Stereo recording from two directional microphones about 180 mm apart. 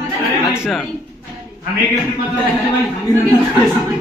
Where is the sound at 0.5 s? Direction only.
Centre (ahead or behind).